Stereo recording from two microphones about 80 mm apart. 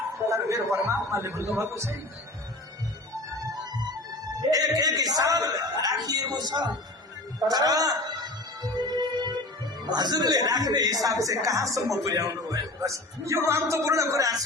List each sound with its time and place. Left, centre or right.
0.3 s a man's voice: right
4.8 s a man's voice: right
7.3 s music: right
9.9 s a man's voice: right